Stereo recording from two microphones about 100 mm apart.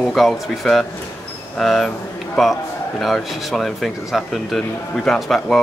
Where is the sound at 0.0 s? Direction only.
Centre (ahead or behind).